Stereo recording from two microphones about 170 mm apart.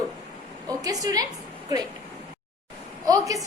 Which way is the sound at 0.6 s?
20° right (ahead or behind).